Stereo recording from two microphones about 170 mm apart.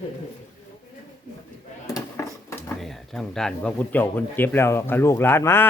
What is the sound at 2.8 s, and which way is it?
Speech, centre (ahead or behind).